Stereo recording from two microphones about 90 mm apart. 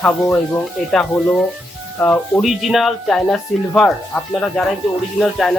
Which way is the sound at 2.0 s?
20° left (ahead or behind).